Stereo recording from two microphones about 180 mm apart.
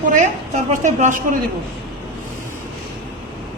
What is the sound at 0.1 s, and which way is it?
A woman's voice, 45° right (ahead or behind).